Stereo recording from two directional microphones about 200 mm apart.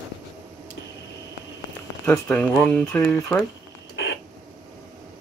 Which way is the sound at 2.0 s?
15° left (ahead or behind).